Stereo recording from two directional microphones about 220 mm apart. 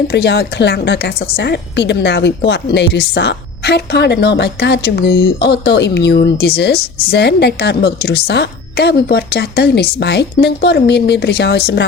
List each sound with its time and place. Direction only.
0.1 s a woman's voice: 50° left (ahead or behind)